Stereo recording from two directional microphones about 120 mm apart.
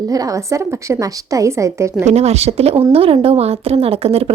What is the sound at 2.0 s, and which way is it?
A woman's voice, 65° right (ahead or behind).